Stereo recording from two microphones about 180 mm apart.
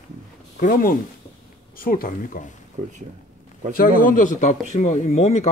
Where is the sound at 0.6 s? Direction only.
50° left (ahead or behind).